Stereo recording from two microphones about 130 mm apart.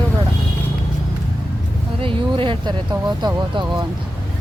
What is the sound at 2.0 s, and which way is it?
Speech, 45° right (ahead or behind).